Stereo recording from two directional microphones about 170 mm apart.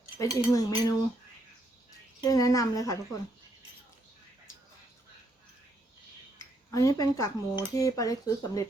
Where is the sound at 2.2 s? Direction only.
20° left (ahead or behind).